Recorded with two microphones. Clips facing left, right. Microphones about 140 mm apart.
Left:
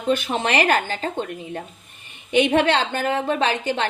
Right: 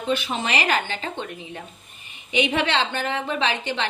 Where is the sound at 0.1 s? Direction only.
50° left (ahead or behind).